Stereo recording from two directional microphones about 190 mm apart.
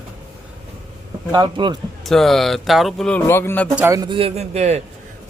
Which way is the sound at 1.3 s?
25° right (ahead or behind).